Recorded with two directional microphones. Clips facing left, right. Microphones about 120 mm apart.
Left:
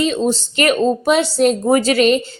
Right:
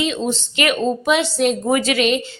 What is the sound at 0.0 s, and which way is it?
A woman's voice, 40° left (ahead or behind).